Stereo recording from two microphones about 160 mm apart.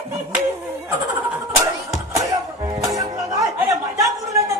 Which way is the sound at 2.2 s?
20° right (ahead or behind).